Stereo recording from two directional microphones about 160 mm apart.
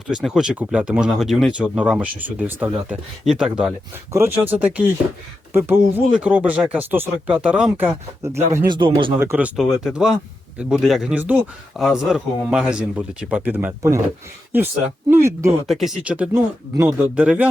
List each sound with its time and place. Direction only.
0.1 s speech: centre (ahead or behind)
8.2 s speech: 15° right (ahead or behind)
8.7 s speech: 30° right (ahead or behind)
9.1 s speech: 15° right (ahead or behind)
9.6 s speech: 5° right (ahead or behind)
15.1 s speech: 15° right (ahead or behind)
15.6 s speech: centre (ahead or behind)